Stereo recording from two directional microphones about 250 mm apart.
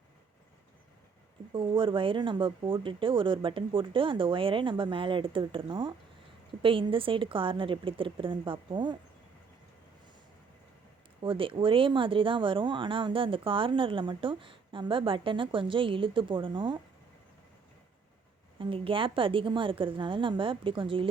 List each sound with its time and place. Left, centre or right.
1.5 s speech: centre
11.2 s speech: right
18.6 s speech: right